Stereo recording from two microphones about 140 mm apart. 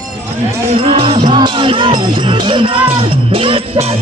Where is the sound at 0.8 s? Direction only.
40° right (ahead or behind).